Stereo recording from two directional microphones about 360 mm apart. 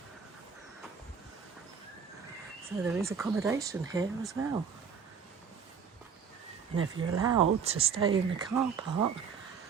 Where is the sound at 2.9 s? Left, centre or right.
Centre.